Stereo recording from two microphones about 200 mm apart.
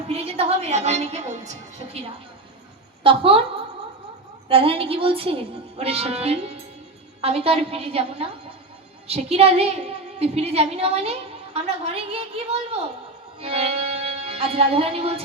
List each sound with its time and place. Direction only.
0.1 s a woman's voice: 30° right (ahead or behind)
4.4 s a woman's voice: 30° right (ahead or behind)